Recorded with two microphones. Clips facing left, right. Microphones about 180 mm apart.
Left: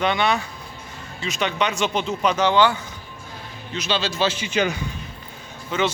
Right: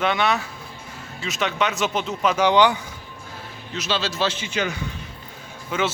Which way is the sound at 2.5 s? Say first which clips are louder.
Right 2 dB; 15° right (ahead or behind).